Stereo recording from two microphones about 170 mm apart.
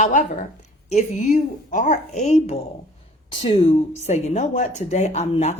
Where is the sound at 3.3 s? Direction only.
30° left (ahead or behind).